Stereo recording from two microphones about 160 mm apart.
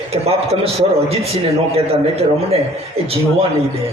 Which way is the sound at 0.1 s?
40° right (ahead or behind).